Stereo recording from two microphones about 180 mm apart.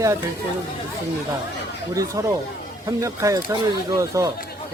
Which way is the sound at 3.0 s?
20° right (ahead or behind).